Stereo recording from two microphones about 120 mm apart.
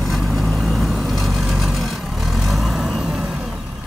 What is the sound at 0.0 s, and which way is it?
Vehicle, centre (ahead or behind).